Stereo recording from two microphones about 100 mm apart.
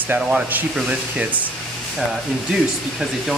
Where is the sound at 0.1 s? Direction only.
15° right (ahead or behind).